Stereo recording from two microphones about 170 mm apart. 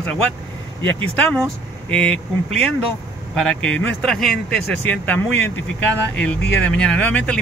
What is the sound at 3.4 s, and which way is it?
Speech, 5° left (ahead or behind).